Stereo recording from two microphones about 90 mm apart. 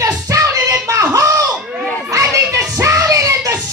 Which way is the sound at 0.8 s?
35° right (ahead or behind).